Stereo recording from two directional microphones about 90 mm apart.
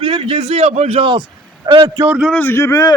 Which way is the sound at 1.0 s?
60° right (ahead or behind).